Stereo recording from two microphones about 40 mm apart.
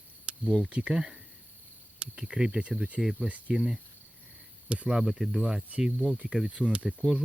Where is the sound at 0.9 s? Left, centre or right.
Centre.